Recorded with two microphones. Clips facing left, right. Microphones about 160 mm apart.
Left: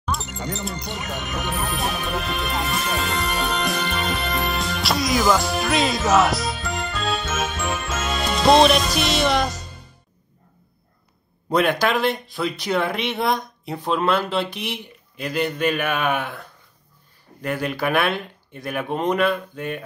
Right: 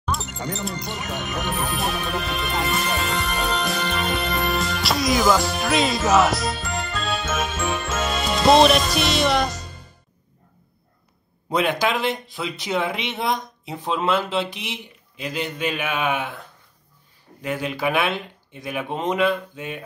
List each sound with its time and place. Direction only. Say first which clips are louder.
0.0 s music: even; centre (ahead or behind)
11.9 s speech: left 2 dB; 60° left (ahead or behind)
17.8 s speech: left 1 dB; 55° left (ahead or behind)